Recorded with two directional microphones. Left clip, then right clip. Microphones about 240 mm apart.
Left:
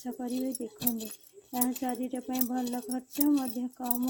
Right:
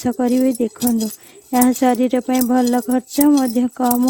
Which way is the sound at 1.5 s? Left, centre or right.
Right.